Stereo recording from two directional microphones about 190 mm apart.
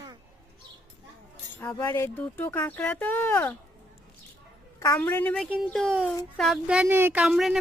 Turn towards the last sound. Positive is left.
turn(degrees=-5)  # may be behind; listen again after turning